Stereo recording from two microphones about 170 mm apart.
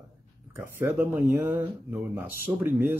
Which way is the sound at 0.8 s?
10° right (ahead or behind).